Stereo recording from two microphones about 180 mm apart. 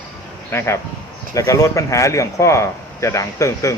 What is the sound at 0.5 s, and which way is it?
Speech, 15° left (ahead or behind).